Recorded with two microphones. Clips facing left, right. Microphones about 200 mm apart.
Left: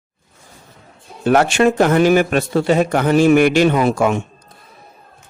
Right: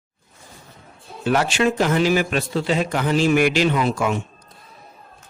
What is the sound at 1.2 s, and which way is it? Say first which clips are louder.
A man's voice: left 6 dB; 55° left (ahead or behind).